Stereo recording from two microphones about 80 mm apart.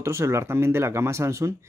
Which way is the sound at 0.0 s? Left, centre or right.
Right.